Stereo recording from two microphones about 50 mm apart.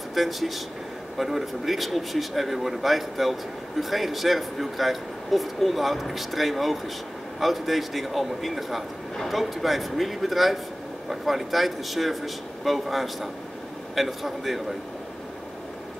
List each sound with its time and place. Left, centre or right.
0.1 s speech: centre